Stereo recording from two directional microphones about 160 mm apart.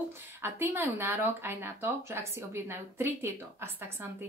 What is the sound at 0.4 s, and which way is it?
Speech, 15° right (ahead or behind).